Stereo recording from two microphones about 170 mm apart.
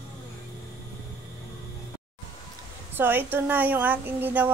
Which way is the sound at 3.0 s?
10° right (ahead or behind).